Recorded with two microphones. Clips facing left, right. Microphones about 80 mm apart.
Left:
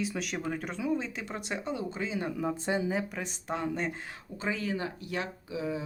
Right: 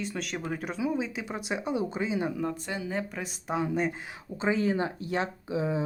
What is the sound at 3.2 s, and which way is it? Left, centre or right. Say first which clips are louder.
Speech: right 3 dB; centre.